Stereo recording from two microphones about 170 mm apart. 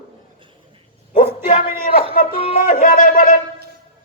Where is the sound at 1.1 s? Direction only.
45° left (ahead or behind).